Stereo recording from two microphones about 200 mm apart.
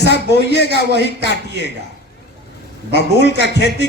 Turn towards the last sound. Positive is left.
turn(degrees=60)  # may be behind; listen again after turning